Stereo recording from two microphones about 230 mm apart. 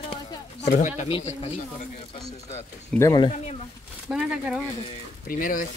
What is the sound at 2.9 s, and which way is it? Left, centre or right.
Speech, centre.